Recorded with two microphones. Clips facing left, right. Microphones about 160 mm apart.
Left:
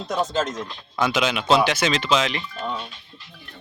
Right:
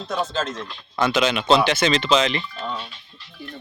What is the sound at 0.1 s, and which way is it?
Speech, 15° left (ahead or behind).